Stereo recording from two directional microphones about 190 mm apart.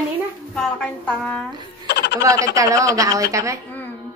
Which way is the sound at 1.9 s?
60° left (ahead or behind).